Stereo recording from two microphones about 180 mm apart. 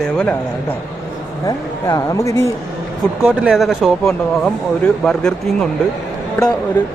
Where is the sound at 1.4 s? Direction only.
20° left (ahead or behind).